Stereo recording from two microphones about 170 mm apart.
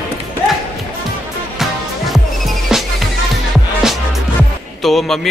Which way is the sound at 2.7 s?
Centre (ahead or behind).